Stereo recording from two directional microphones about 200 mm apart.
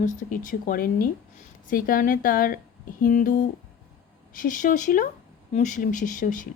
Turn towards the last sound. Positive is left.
turn(degrees=40)  # may be behind; listen again after turning